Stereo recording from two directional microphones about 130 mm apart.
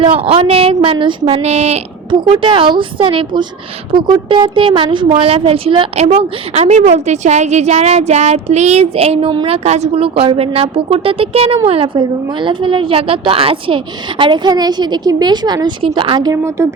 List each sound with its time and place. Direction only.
0.0 s a woman's voice: 45° right (ahead or behind)
1.4 s a woman's voice: 55° right (ahead or behind)
2.0 s speech: 40° right (ahead or behind)
6.1 s a woman's voice: 55° right (ahead or behind); by 9.6 s 40° right (ahead or behind)
9.6 s speech: 60° right (ahead or behind); by 16.4 s 35° right (ahead or behind)
16.4 s speech: 20° right (ahead or behind)